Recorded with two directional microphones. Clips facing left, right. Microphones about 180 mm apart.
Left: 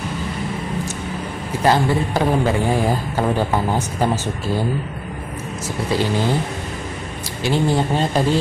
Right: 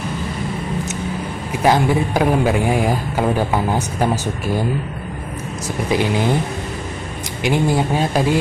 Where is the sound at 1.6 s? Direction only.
10° right (ahead or behind).